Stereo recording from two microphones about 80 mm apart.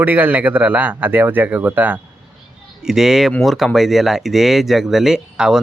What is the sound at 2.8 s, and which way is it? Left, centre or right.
Speech, centre.